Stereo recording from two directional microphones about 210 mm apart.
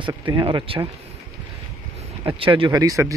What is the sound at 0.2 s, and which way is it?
Speech, 20° right (ahead or behind).